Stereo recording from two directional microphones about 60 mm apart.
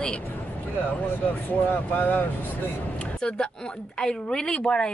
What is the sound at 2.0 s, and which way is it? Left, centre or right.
Speech, left.